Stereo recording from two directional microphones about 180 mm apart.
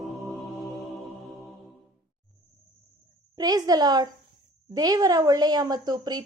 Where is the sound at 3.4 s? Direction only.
20° right (ahead or behind).